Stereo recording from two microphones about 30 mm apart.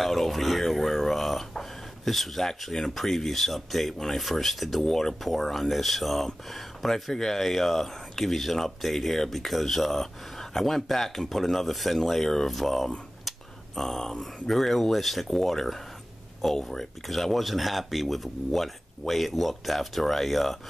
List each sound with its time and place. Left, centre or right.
0.0 s a sound: centre
1.6 s speech: centre
4.8 s speech: centre
5.2 s speech: centre